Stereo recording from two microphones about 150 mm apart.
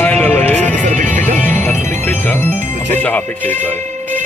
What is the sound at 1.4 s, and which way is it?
Music, 10° left (ahead or behind).